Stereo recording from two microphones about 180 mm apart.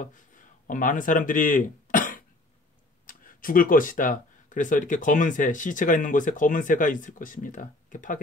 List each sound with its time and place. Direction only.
0.7 s speech: 45° left (ahead or behind)